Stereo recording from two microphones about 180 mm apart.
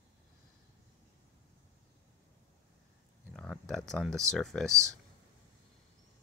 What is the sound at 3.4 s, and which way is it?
Speech, 5° left (ahead or behind).